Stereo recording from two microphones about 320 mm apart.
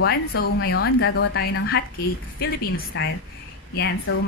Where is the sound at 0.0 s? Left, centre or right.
Left.